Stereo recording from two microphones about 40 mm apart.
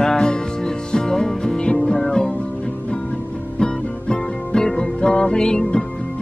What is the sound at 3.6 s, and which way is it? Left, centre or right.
Music, left.